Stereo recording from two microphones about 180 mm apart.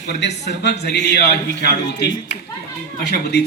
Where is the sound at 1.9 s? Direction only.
20° left (ahead or behind).